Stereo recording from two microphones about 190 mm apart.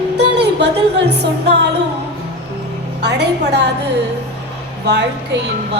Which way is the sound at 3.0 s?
65° right (ahead or behind).